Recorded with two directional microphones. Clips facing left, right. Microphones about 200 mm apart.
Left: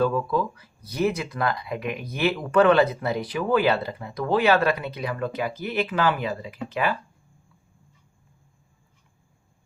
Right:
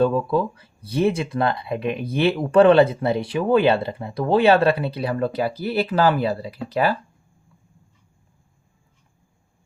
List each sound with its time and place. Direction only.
0.0 s speech: 25° right (ahead or behind)